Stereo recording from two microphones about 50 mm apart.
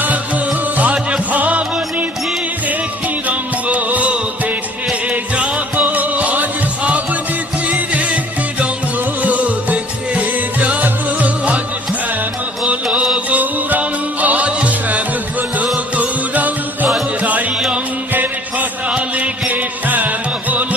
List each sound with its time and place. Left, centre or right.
1.3 s music: right
3.2 s music: right
9.2 s music: right
12.6 s music: centre
13.3 s music: right
18.9 s music: right